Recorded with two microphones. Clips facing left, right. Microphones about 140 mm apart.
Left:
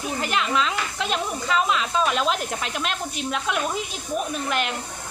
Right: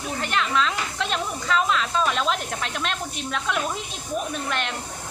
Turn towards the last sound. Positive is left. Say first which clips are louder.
# left 2 dB
turn(degrees=5)  # may be behind; listen again after turning